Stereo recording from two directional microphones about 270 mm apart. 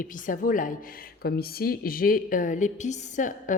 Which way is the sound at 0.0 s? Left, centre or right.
Left.